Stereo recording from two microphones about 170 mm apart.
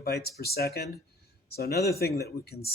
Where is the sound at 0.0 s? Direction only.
65° left (ahead or behind).